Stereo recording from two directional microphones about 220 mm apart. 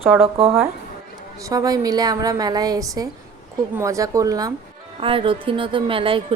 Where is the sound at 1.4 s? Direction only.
15° right (ahead or behind).